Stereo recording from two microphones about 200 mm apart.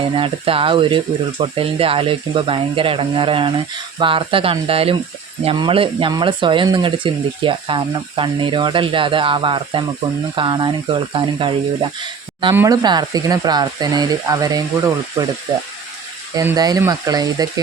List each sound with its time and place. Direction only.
0.0 s speech: 25° right (ahead or behind)
16.3 s speech: 15° right (ahead or behind)